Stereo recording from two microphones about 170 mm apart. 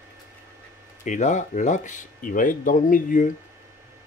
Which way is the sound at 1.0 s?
45° left (ahead or behind).